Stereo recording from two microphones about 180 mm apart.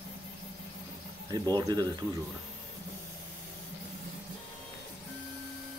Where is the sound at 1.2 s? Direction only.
20° right (ahead or behind).